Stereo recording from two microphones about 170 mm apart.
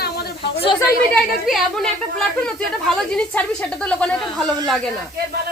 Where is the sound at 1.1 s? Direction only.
5° left (ahead or behind).